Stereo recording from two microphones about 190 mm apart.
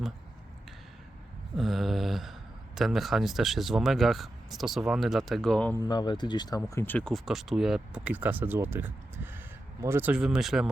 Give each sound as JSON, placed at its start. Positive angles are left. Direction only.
{"t": 1.5, "sound": "a sound", "side_deg": 0}
{"t": 2.7, "sound": "speech", "side_deg": 0}
{"t": 5.8, "sound": "speech", "side_deg": 20}